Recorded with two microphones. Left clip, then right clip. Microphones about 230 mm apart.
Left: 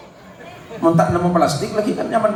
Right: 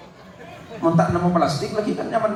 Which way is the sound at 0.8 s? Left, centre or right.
Left.